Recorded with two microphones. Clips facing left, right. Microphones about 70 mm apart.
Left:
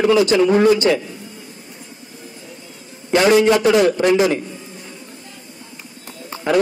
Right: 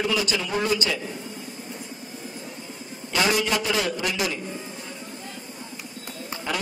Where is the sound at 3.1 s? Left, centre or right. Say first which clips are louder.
Left 9 dB; left.